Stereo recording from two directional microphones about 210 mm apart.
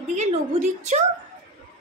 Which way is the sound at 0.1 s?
35° right (ahead or behind).